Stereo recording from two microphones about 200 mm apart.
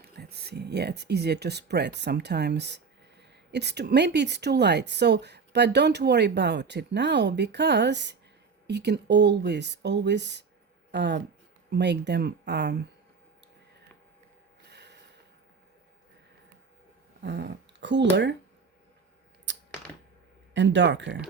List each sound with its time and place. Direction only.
0.0 s speech: 55° right (ahead or behind)
14.7 s snort: 55° right (ahead or behind)
17.2 s speech: 60° right (ahead or behind)
19.5 s a sound: 65° right (ahead or behind)
20.5 s speech: 65° right (ahead or behind)